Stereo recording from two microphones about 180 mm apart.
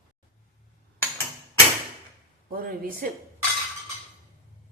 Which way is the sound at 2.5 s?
55° right (ahead or behind).